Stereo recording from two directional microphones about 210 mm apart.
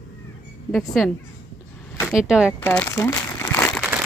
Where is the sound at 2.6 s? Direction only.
10° left (ahead or behind).